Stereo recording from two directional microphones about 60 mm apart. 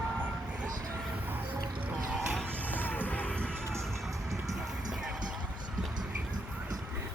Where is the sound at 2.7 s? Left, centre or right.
Left.